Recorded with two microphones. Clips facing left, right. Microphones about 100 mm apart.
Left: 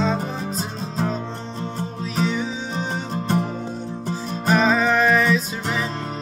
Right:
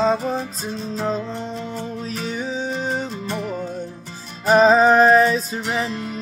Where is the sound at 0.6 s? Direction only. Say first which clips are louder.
Even; 40° left (ahead or behind).